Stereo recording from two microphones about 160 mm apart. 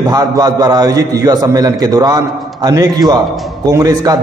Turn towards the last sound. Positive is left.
turn(degrees=-25)  # may be behind; listen again after turning